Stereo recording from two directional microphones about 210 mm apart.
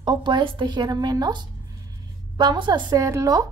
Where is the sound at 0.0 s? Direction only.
20° right (ahead or behind).